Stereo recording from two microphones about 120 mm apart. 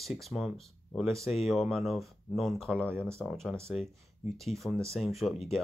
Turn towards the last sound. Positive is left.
turn(degrees=0)  # may be behind; listen again after turning